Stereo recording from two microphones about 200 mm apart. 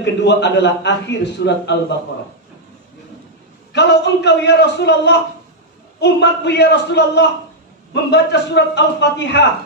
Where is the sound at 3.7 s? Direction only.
60° left (ahead or behind).